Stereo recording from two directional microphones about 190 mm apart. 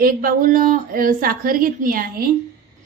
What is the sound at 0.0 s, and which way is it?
A woman's voice, 50° right (ahead or behind).